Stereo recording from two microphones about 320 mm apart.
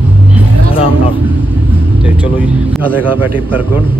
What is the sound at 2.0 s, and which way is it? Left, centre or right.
A man's voice, centre.